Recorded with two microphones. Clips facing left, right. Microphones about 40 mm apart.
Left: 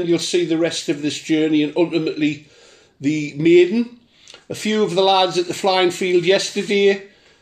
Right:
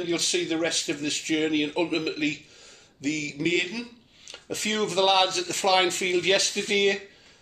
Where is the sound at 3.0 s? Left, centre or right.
Left.